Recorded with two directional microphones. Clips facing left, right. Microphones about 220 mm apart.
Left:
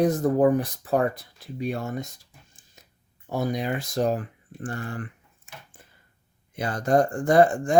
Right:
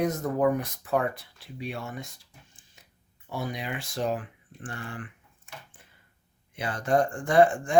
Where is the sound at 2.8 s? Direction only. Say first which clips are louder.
Left 5 dB; 40° left (ahead or behind).